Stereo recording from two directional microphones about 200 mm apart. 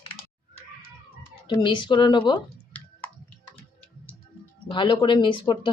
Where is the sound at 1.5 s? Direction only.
25° left (ahead or behind).